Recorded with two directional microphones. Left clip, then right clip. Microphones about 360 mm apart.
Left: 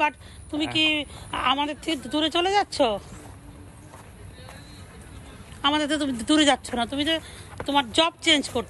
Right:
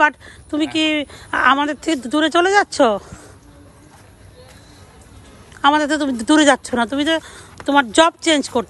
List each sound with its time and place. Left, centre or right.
0.0 s a woman's voice: right
5.6 s speech: centre